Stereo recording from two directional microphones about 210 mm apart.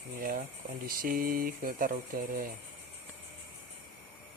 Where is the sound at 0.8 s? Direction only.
45° right (ahead or behind).